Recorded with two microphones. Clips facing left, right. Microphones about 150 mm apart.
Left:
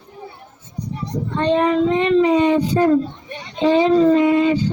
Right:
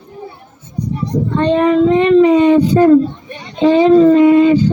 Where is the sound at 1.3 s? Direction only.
55° right (ahead or behind).